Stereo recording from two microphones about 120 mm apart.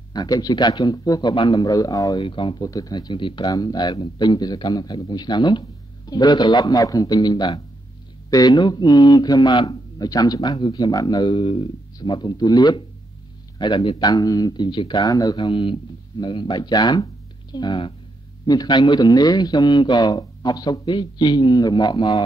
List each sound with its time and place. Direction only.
0.1 s a man's voice: 35° left (ahead or behind)
2.2 s speech: 45° left (ahead or behind)
2.6 s a man's voice: 30° left (ahead or behind)
17.0 s a sound: 40° left (ahead or behind)
18.4 s a man's voice: 35° left (ahead or behind)